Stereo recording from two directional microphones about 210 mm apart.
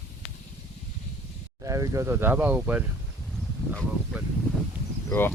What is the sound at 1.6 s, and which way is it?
Speech, 15° right (ahead or behind).